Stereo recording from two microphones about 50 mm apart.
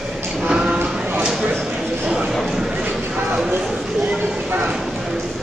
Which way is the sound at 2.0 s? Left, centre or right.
Centre.